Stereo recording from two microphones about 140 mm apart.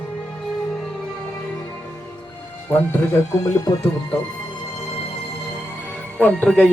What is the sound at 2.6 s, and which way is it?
Speech, 15° left (ahead or behind).